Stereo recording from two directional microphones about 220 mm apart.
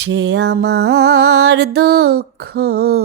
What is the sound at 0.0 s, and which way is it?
Music, 50° right (ahead or behind).